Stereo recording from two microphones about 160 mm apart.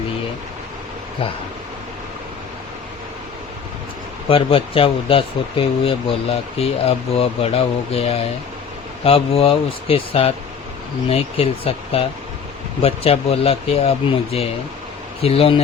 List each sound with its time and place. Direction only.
4.3 s speech: 35° left (ahead or behind)